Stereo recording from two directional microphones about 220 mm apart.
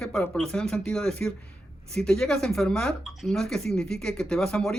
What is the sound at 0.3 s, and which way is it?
Speech, 5° left (ahead or behind).